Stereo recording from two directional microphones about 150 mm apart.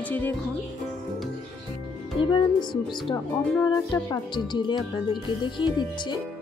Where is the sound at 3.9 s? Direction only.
30° left (ahead or behind).